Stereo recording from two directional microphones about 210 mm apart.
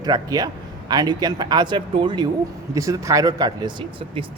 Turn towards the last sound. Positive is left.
turn(degrees=-20)  # may be behind; listen again after turning